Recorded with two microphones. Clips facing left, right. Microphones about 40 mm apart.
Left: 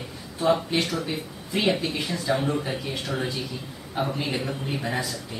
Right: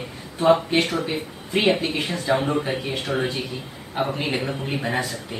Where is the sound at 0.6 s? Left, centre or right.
Right.